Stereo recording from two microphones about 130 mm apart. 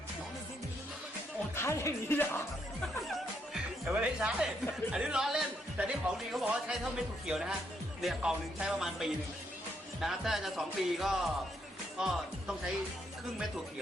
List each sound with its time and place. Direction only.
1.5 s speech: 20° left (ahead or behind)
3.5 s music: 10° right (ahead or behind)
4.9 s speech: 5° right (ahead or behind)